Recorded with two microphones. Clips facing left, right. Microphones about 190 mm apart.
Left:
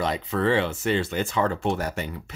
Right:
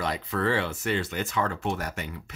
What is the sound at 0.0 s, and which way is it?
Speech, 25° left (ahead or behind).